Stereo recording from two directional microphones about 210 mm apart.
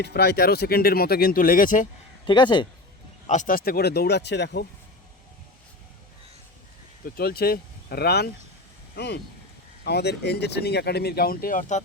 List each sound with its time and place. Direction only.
0.0 s speech: 50° left (ahead or behind)
2.2 s speech: 20° left (ahead or behind)
3.2 s speech: 35° left (ahead or behind); by 4.6 s 55° left (ahead or behind)
7.0 s speech: 45° left (ahead or behind)